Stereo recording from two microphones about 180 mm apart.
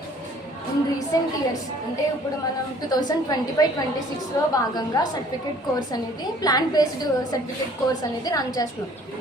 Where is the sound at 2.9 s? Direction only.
20° left (ahead or behind).